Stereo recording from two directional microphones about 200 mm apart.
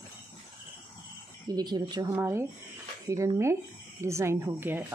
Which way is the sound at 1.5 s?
20° right (ahead or behind).